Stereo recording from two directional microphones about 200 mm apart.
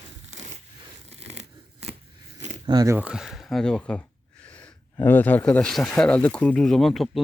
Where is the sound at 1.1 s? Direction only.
30° right (ahead or behind).